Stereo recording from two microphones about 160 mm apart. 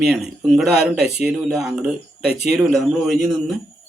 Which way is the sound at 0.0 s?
Centre (ahead or behind).